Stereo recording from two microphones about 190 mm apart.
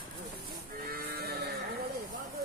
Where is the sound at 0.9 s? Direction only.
50° right (ahead or behind).